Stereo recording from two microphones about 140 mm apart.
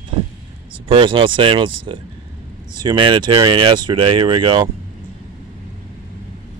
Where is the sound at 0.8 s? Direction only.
40° right (ahead or behind).